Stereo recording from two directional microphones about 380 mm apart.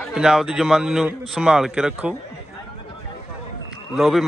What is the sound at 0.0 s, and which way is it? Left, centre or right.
A man's voice, centre.